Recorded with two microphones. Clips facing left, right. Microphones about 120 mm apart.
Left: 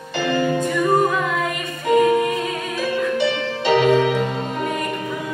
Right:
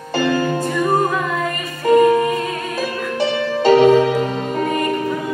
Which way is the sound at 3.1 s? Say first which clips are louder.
Right 2 dB; 40° right (ahead or behind).